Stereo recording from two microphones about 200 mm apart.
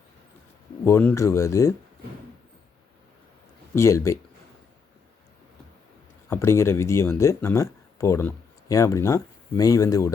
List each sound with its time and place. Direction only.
0.9 s speech: 15° left (ahead or behind)
3.8 s speech: 15° left (ahead or behind)
6.2 s speech: 15° left (ahead or behind)